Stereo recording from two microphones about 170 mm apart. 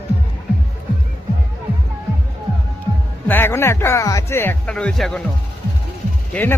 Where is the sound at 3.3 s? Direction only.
10° left (ahead or behind).